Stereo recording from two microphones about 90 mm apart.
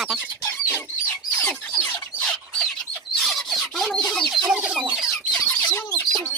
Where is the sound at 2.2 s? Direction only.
10° left (ahead or behind).